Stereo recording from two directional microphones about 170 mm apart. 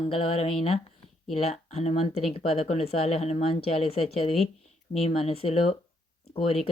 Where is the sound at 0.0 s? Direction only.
35° left (ahead or behind).